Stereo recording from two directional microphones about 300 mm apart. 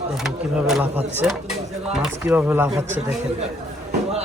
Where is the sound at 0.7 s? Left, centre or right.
Centre.